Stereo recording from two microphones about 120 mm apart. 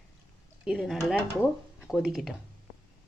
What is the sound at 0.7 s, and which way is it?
Speech, centre (ahead or behind).